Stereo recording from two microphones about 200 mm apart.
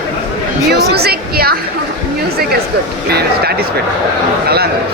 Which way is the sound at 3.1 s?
55° right (ahead or behind).